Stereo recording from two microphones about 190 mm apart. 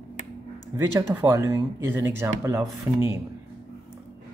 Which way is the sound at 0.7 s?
15° right (ahead or behind).